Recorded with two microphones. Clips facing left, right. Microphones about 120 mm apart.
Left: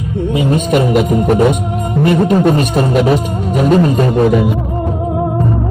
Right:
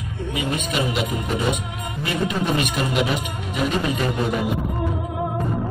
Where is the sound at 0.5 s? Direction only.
50° left (ahead or behind).